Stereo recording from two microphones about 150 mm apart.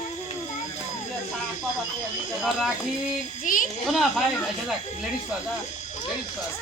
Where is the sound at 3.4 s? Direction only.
65° left (ahead or behind).